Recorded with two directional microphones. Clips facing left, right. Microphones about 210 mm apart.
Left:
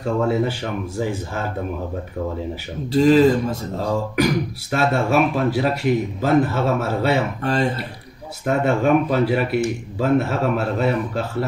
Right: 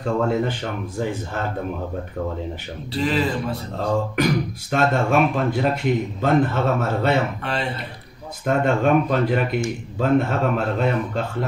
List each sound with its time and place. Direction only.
0.0 s speech: 5° left (ahead or behind)
2.9 s speech: 45° left (ahead or behind)
4.2 s speech: 5° left (ahead or behind)
7.4 s speech: 45° left (ahead or behind)
8.5 s speech: 5° left (ahead or behind)